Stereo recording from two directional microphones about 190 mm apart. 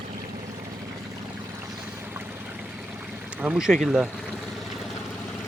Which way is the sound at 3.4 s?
5° right (ahead or behind).